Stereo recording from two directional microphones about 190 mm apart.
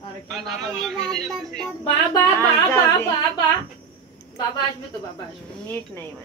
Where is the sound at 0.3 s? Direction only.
Centre (ahead or behind).